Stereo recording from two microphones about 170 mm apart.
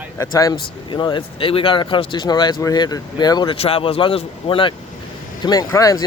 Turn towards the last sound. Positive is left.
turn(degrees=20)  # may be behind; listen again after turning